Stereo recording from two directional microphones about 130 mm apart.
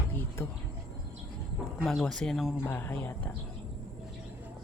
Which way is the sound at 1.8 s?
Centre (ahead or behind).